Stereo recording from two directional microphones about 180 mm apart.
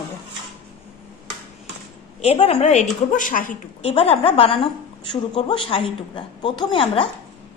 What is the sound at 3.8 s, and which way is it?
A woman's voice, 35° left (ahead or behind).